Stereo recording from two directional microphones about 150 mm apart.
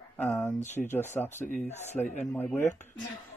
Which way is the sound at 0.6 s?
50° left (ahead or behind).